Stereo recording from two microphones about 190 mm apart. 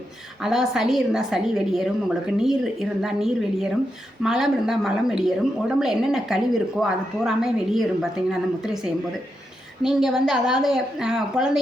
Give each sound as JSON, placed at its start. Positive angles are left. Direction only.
{"t": 0.4, "sound": "a woman's voice", "side_deg": 0}